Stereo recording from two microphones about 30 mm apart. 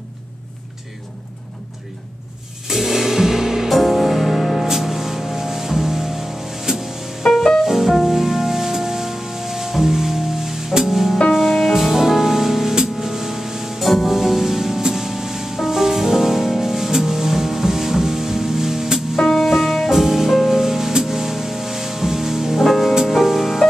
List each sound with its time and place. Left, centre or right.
2.7 s music: centre
3.7 s music: centre
4.6 s music: centre
7.2 s music: centre
7.6 s music: centre
13.8 s music: centre